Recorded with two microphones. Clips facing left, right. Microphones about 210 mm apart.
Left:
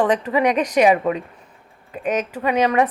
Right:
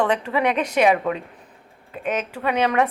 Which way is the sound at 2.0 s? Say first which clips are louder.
Left 3 dB; 40° left (ahead or behind).